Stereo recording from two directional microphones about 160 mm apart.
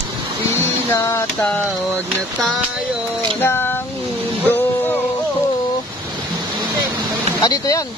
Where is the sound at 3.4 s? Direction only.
15° left (ahead or behind).